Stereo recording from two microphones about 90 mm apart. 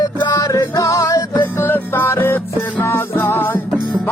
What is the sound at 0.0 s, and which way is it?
Music, 50° left (ahead or behind).